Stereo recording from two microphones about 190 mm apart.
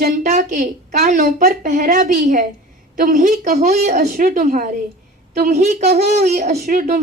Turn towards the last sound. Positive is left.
turn(degrees=-40)  # may be behind; listen again after turning